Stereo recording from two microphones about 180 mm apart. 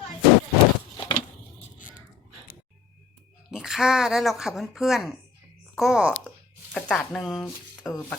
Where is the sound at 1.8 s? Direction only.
50° left (ahead or behind).